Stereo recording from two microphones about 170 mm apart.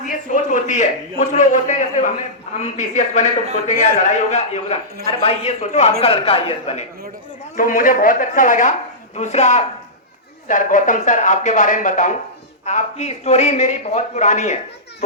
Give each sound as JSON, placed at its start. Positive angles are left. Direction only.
{"t": 0.0, "sound": "a man's voice", "side_deg": 45}
{"t": 7.5, "sound": "a man's voice", "side_deg": 55}